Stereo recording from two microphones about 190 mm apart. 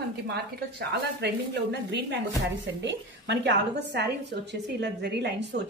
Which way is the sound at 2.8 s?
65° right (ahead or behind).